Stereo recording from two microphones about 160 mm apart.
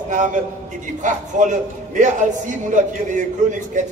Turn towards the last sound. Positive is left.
turn(degrees=-50)  # may be behind; listen again after turning